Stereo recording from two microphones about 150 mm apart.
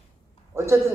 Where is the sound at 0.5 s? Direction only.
20° right (ahead or behind).